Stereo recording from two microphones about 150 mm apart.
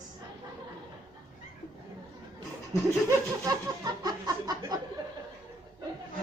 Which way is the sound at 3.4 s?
25° right (ahead or behind).